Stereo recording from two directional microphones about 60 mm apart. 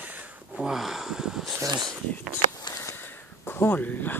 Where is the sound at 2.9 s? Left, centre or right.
Left.